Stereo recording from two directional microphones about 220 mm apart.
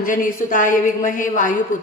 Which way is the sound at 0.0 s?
35° left (ahead or behind).